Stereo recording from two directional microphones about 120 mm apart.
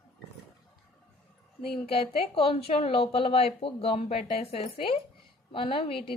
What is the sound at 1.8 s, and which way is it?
Speech, 55° left (ahead or behind).